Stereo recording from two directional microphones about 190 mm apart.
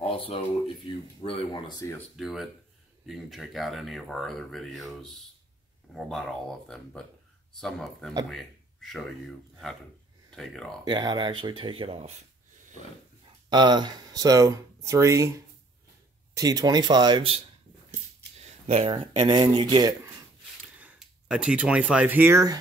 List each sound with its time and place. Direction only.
0.0 s a sound: 30° left (ahead or behind)
1.2 s speech: 25° left (ahead or behind)
2.0 s speech: centre (ahead or behind)
10.9 s speech: 20° right (ahead or behind)
13.5 s speech: 25° right (ahead or behind)
16.3 s speech: 20° right (ahead or behind)
18.7 s speech: 30° right (ahead or behind)
20.7 s speech: 5° right (ahead or behind)